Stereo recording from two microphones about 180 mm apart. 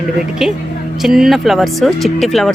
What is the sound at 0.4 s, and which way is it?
Speech, centre (ahead or behind).